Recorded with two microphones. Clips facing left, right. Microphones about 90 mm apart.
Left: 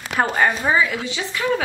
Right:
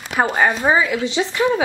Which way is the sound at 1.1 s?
25° right (ahead or behind).